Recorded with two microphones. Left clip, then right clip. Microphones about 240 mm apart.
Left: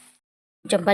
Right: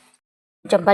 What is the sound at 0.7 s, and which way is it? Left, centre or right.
Speech, centre.